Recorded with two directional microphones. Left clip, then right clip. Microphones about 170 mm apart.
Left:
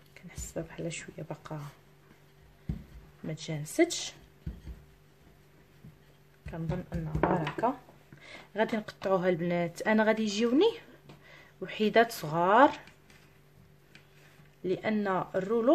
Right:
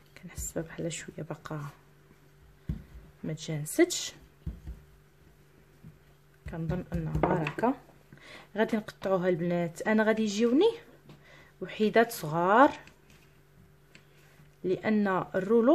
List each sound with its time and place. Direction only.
0.1 s speech: 25° right (ahead or behind)
3.3 s speech: 20° right (ahead or behind)
6.4 s speech: 15° right (ahead or behind)
6.9 s speech: 30° right (ahead or behind)
14.6 s speech: 20° right (ahead or behind)